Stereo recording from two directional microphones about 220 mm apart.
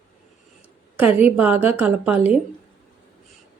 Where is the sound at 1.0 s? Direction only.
5° right (ahead or behind).